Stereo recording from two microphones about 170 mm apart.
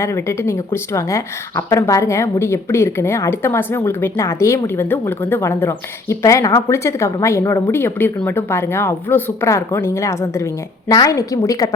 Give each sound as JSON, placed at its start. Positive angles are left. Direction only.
{"t": 0.0, "sound": "a woman's voice", "side_deg": 15}